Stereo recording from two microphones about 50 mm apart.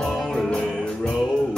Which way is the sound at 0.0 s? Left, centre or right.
Centre.